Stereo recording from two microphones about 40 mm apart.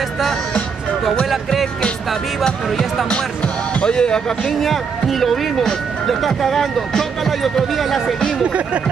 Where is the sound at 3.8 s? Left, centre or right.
Left.